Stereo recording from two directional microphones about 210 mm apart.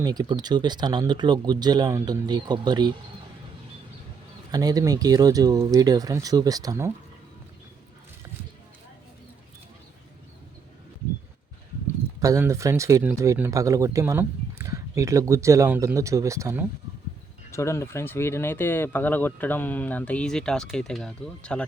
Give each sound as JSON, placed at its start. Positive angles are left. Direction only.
{"t": 0.0, "sound": "speech", "side_deg": -20}
{"t": 4.5, "sound": "speech", "side_deg": -15}
{"t": 12.2, "sound": "speech", "side_deg": -15}
{"t": 17.5, "sound": "speech", "side_deg": 15}